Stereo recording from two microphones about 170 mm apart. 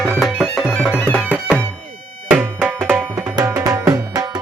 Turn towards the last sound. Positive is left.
turn(degrees=-20)  # may be behind; listen again after turning